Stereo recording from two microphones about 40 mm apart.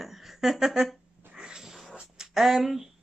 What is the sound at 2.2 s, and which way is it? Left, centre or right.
Speech, centre.